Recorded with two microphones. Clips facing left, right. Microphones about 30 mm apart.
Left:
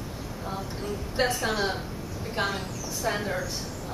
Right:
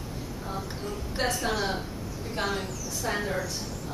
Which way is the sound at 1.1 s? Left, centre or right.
Centre.